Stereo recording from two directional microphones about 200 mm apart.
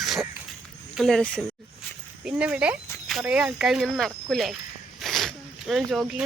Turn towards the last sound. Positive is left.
turn(degrees=0)  # may be behind; listen again after turning